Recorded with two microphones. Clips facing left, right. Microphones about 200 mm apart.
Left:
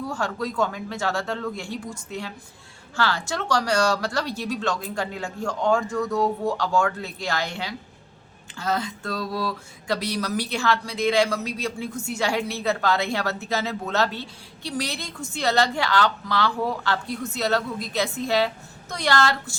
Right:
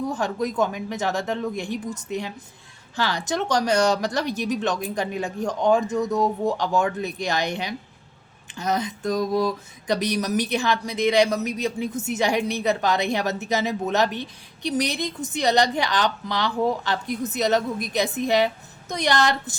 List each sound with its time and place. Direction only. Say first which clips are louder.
0.0 s speech: right 3 dB; 20° right (ahead or behind)